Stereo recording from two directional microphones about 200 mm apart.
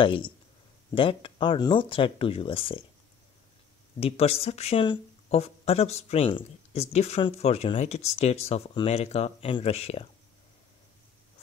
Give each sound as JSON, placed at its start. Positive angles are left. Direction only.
{"t": 0.0, "sound": "speech", "side_deg": 25}
{"t": 4.0, "sound": "speech", "side_deg": 30}